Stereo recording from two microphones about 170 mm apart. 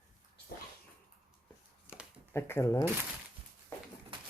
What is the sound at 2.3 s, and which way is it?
Speech, 15° left (ahead or behind).